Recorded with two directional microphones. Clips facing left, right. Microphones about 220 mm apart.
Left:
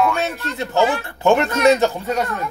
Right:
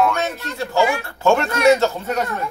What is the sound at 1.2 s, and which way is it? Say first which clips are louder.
Speech: left 1 dB; 15° left (ahead or behind).